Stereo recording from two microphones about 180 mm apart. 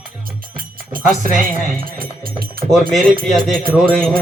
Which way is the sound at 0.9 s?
50° right (ahead or behind).